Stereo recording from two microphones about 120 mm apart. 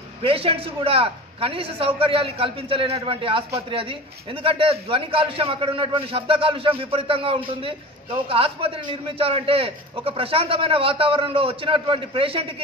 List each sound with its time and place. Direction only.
0.2 s a man's voice: 50° right (ahead or behind)